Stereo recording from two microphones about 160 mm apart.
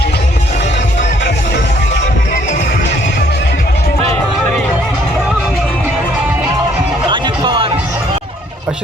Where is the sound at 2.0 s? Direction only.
60° left (ahead or behind).